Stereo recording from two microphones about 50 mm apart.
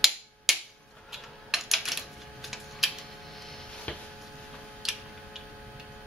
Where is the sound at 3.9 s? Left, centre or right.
Left.